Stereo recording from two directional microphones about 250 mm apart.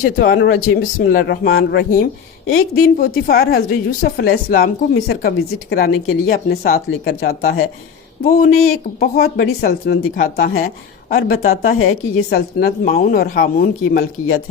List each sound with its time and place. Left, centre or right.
0.0 s a woman's voice: left